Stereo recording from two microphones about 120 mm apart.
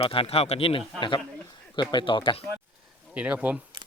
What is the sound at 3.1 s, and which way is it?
Speech, 10° right (ahead or behind).